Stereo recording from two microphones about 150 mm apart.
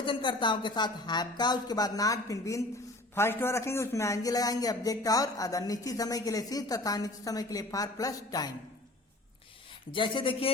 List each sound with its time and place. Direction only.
0.0 s a man's voice: 35° left (ahead or behind)
9.9 s speech: 35° left (ahead or behind)